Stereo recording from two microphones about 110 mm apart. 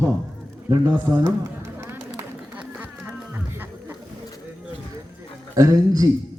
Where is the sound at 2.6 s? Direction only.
20° right (ahead or behind).